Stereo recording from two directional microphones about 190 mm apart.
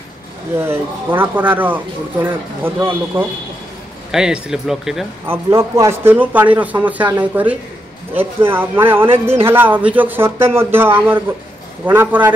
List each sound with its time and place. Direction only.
0.6 s speech: 10° right (ahead or behind)